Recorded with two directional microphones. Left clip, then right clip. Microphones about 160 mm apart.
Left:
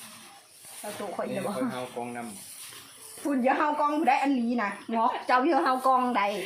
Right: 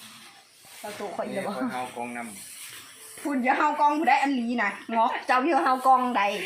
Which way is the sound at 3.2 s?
10° right (ahead or behind).